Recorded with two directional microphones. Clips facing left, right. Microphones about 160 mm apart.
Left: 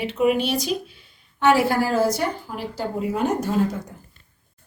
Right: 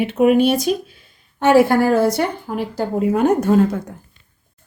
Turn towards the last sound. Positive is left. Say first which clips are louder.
# right 7 dB
turn(degrees=-55)  # may be behind; listen again after turning